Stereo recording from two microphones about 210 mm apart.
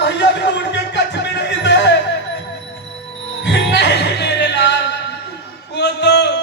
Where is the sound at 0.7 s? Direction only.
55° left (ahead or behind).